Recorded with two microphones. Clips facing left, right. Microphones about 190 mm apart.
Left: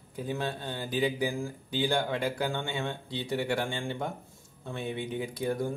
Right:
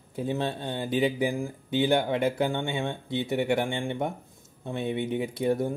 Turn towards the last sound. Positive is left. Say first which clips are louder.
# right 5 dB
turn(degrees=-25)  # may be behind; listen again after turning